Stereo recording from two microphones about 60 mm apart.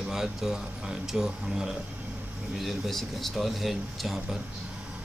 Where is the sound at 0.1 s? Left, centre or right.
Centre.